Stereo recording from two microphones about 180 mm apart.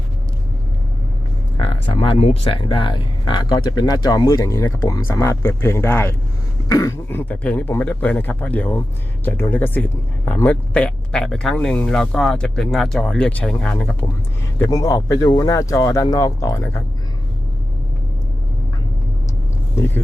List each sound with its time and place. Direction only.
1.5 s speech: 30° left (ahead or behind); by 13.9 s 5° left (ahead or behind)
14.6 s speech: 20° left (ahead or behind)